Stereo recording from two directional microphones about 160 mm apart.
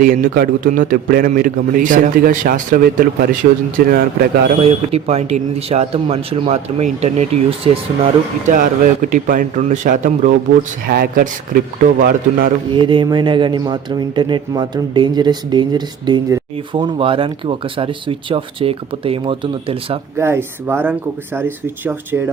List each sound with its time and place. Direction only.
0.0 s a man's voice: 60° right (ahead or behind)
4.6 s speech: 40° right (ahead or behind)
8.5 s a man's voice: 55° right (ahead or behind)
12.7 s speech: 30° right (ahead or behind)
20.1 s speech: 15° right (ahead or behind)